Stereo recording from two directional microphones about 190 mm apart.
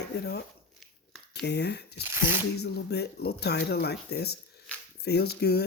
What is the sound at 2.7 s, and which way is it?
Speech, 60° left (ahead or behind).